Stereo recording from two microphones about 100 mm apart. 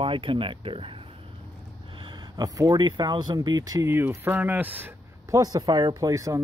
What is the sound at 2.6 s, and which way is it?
Speech, 45° right (ahead or behind).